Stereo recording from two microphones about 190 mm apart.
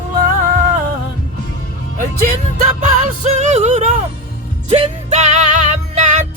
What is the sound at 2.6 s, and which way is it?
Music, 40° right (ahead or behind).